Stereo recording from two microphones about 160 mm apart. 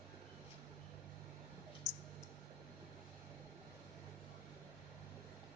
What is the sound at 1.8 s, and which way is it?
Clicking, 20° left (ahead or behind).